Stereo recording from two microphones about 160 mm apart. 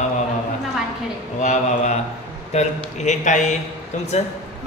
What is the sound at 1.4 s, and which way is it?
A man's voice, 45° left (ahead or behind).